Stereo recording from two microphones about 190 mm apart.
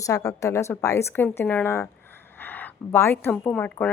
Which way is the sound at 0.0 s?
15° left (ahead or behind).